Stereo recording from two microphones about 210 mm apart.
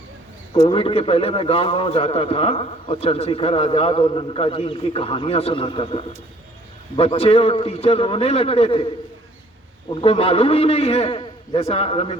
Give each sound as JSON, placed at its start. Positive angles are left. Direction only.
{"t": 0.7, "sound": "a man's voice", "side_deg": 25}
{"t": 9.9, "sound": "a man's voice", "side_deg": 25}